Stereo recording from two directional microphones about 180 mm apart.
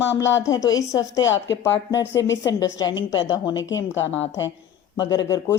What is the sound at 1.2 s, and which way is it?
Speech, 85° left.